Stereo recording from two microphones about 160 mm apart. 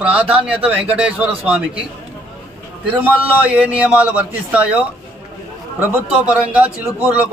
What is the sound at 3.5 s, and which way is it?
A man's voice, 10° right (ahead or behind).